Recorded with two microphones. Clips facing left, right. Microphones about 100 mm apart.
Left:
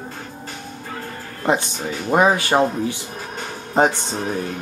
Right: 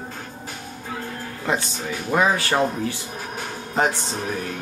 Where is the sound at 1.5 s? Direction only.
20° left (ahead or behind).